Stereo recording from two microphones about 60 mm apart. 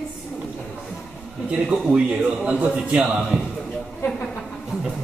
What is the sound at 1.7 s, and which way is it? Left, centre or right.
A man's voice, centre.